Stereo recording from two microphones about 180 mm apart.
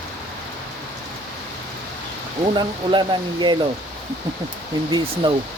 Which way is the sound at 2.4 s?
25° right (ahead or behind).